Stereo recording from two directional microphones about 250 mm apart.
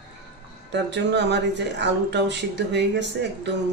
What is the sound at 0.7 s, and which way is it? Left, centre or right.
A man's voice, right.